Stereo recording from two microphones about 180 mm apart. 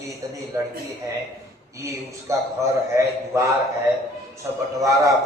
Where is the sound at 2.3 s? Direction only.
15° right (ahead or behind).